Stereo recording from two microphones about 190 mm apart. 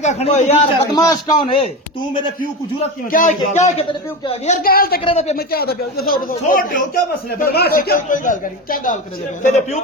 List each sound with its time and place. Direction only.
0.0 s a man's voice: 35° left (ahead or behind)
0.9 s a man's voice: 20° left (ahead or behind)
3.1 s a man's voice: 40° left (ahead or behind)
4.6 s a man's voice: 50° left (ahead or behind)
5.0 s a man's voice: 35° left (ahead or behind)
5.4 s a man's voice: 55° left (ahead or behind); by 9.8 s 35° left (ahead or behind)